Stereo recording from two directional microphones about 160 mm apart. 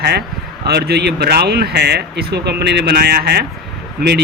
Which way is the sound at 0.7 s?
90° right.